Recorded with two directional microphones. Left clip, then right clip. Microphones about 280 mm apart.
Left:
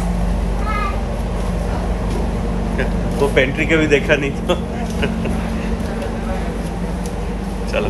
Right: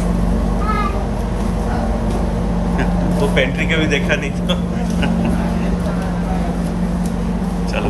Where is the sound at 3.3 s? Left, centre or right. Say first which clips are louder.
Left 3 dB; right.